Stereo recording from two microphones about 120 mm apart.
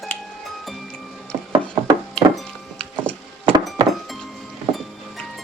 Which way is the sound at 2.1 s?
5° left (ahead or behind).